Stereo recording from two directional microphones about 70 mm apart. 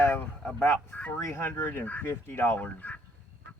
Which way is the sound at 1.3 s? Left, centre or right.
Left.